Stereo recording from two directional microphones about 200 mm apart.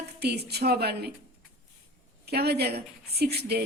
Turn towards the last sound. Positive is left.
turn(degrees=-55)  # may be behind; listen again after turning